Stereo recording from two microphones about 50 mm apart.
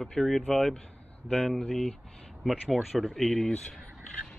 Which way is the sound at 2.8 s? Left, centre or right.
Centre.